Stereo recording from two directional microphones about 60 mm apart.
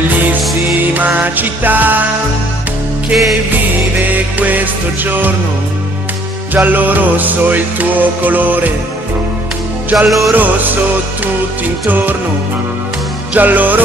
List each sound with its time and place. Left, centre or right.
0.4 s music: centre
0.9 s music: right
4.1 s music: right
6.5 s music: right
9.9 s music: centre
10.3 s music: right
13.3 s music: right